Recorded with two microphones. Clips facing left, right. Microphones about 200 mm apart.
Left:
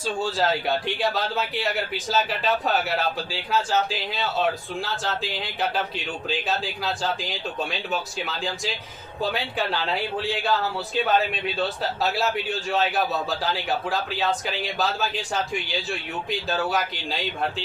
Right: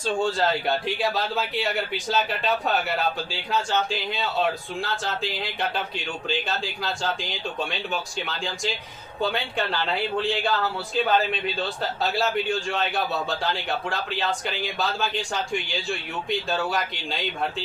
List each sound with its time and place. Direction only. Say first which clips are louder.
0.0 s a man's voice: right 1 dB; 5° left (ahead or behind)
10.2 s a man's voice: right 1 dB; centre (ahead or behind)